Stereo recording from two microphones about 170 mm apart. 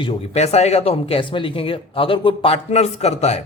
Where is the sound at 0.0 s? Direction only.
35° left (ahead or behind).